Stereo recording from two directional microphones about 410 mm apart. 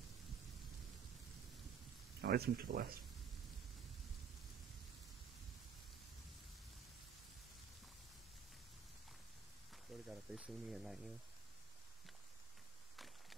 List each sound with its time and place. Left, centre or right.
2.2 s speech: right
10.0 s speech: centre
12.9 s a sound: centre